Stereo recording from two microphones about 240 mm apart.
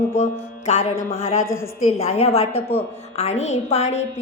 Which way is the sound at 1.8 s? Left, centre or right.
Left.